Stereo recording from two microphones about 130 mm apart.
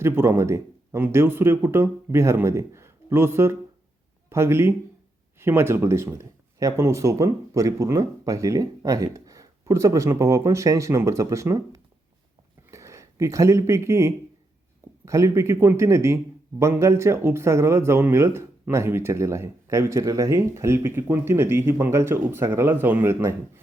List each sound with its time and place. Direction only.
0.0 s a man's voice: 20° right (ahead or behind)